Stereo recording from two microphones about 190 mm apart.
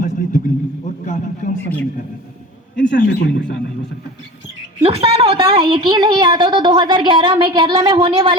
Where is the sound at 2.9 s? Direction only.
60° left (ahead or behind).